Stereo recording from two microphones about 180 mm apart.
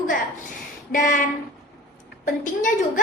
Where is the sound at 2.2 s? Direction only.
45° left (ahead or behind).